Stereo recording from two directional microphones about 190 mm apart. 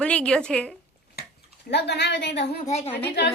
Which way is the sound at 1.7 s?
60° left (ahead or behind).